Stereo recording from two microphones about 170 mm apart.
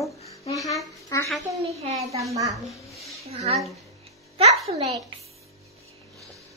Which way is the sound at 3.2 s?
40° right (ahead or behind).